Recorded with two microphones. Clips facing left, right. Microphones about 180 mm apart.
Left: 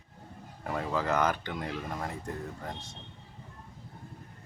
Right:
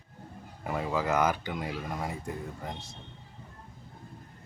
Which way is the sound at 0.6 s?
5° right (ahead or behind).